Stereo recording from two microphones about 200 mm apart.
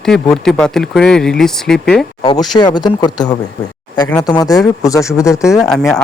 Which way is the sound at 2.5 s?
20° left (ahead or behind).